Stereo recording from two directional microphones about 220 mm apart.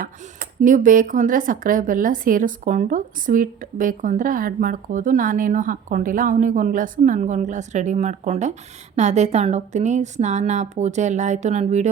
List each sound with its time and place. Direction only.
0.0 s speech: 40° right (ahead or behind)